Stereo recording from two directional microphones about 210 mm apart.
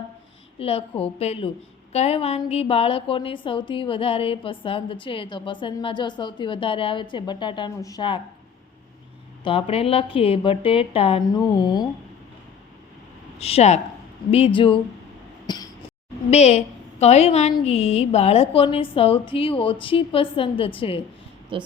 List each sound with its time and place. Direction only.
0.6 s a woman's voice: 25° left (ahead or behind)
9.4 s a woman's voice: 25° left (ahead or behind)
13.4 s a woman's voice: 30° left (ahead or behind)
15.4 s a sound: 20° left (ahead or behind)
16.3 s a woman's voice: 30° left (ahead or behind)
21.5 s a woman's voice: 25° right (ahead or behind)